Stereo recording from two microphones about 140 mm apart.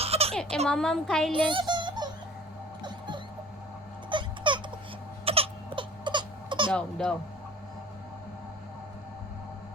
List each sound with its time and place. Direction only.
0.0 s a sound: 45° right (ahead or behind)
0.7 s a woman's voice: 5° left (ahead or behind)
1.3 s music: 35° right (ahead or behind)
4.1 s a sound: 35° right (ahead or behind)
5.2 s crying: 45° right (ahead or behind)
6.7 s speech: 5° left (ahead or behind)